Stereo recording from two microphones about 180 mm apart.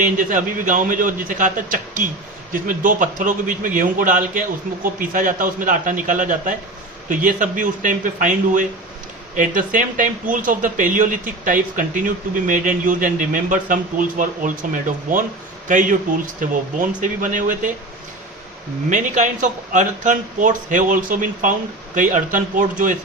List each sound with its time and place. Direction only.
0.0 s speech: 45° right (ahead or behind)
17.0 s speech: 45° right (ahead or behind)
18.9 s speech: 45° right (ahead or behind)